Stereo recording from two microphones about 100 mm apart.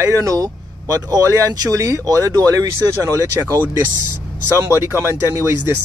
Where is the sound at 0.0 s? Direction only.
35° right (ahead or behind).